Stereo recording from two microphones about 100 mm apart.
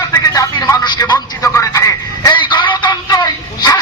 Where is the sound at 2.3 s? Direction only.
50° left (ahead or behind).